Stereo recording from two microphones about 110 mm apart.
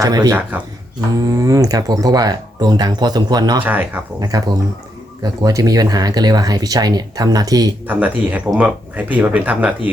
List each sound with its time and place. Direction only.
0.0 s speech: 35° right (ahead or behind)
3.6 s speech: 15° right (ahead or behind)
4.2 s speech: 35° right (ahead or behind)
7.9 s speech: 15° right (ahead or behind)